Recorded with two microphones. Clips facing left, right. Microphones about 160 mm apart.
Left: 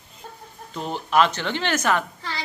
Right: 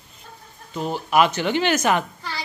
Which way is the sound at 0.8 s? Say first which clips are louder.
Right 1 dB; 5° right (ahead or behind).